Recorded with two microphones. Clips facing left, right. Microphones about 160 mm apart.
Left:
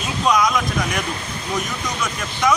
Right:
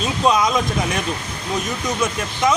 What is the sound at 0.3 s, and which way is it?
Speech, 25° right (ahead or behind).